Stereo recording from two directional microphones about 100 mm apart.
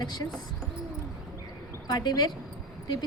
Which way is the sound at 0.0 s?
45° left (ahead or behind).